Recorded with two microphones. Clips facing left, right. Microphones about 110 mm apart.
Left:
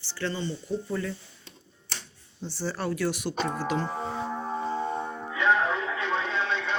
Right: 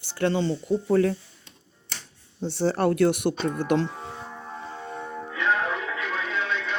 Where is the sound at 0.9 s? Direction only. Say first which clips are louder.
Right 14 dB; 70° right (ahead or behind).